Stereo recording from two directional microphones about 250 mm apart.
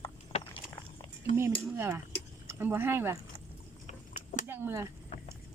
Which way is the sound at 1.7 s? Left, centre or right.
Centre.